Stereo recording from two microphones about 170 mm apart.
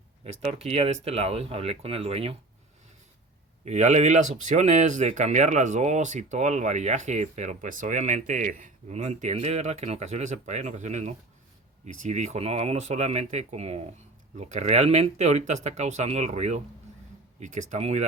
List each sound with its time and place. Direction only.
0.3 s speech: 35° right (ahead or behind)
3.6 s speech: 40° right (ahead or behind)